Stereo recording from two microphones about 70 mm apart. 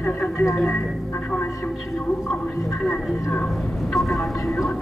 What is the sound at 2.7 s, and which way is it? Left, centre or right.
Speech, centre.